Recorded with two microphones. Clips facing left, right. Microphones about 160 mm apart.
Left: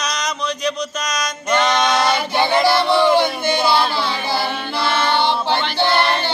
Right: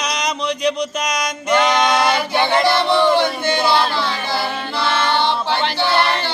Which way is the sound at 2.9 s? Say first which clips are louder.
Even; 10° left (ahead or behind).